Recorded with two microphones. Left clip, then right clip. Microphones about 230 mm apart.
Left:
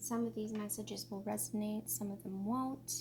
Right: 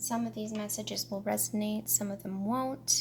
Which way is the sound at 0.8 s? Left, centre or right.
Right.